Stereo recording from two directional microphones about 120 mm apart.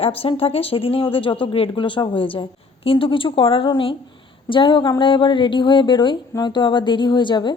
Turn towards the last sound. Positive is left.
turn(degrees=40)  # may be behind; listen again after turning